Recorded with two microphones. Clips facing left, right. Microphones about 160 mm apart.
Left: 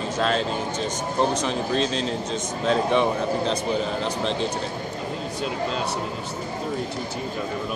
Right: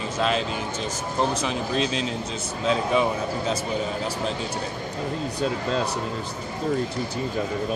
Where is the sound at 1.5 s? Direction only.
35° left (ahead or behind).